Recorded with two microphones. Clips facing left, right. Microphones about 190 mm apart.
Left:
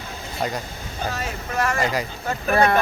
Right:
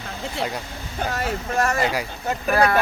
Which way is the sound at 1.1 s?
50° right (ahead or behind).